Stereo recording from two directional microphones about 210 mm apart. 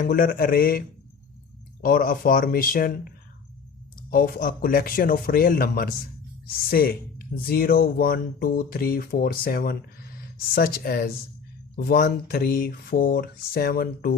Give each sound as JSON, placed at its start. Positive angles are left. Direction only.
{"t": 0.0, "sound": "speech", "side_deg": 40}
{"t": 4.1, "sound": "speech", "side_deg": 40}